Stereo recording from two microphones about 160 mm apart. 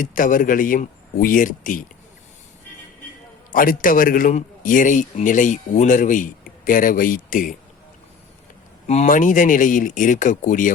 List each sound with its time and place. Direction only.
0.0 s a man's voice: 55° left (ahead or behind)
3.5 s a man's voice: 60° left (ahead or behind)
8.9 s speech: 50° left (ahead or behind)